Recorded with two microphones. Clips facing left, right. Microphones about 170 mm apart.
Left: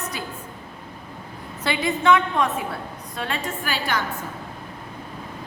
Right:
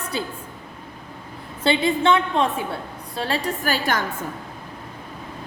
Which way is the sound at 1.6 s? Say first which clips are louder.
Right 2 dB; 30° right (ahead or behind).